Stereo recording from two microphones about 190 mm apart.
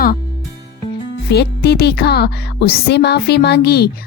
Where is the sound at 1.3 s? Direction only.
60° left (ahead or behind).